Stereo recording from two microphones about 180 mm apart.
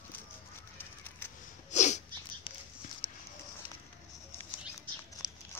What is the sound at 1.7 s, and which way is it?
Sneeze, 40° left (ahead or behind).